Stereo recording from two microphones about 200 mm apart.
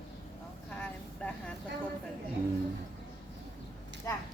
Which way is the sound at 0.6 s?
5° left (ahead or behind).